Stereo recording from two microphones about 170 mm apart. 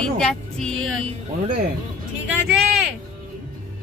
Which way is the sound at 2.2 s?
10° right (ahead or behind).